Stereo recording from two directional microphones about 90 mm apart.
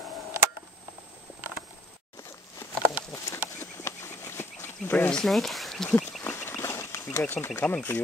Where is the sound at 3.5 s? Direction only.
30° left (ahead or behind).